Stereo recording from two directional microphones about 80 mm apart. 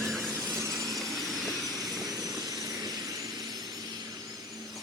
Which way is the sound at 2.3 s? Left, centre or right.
Right.